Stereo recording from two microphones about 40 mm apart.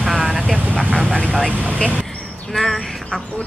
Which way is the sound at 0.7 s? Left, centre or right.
Left.